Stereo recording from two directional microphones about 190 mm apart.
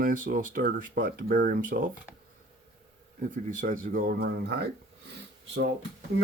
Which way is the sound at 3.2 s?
45° right (ahead or behind).